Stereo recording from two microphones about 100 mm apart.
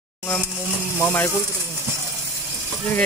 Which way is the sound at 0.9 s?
20° left (ahead or behind).